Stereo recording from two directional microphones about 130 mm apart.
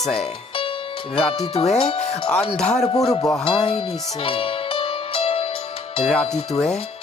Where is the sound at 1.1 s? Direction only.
45° left (ahead or behind).